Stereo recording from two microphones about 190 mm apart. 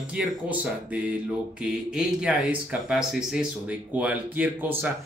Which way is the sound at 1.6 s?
5° right (ahead or behind).